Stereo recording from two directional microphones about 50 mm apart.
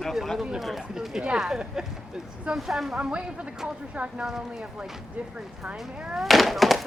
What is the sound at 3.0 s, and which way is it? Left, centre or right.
Speech, right.